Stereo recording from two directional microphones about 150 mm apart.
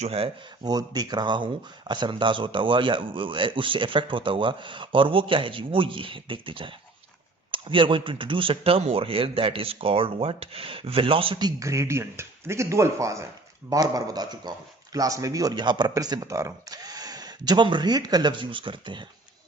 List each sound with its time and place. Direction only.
0.0 s speech: 40° right (ahead or behind)
0.6 s speech: 25° right (ahead or behind)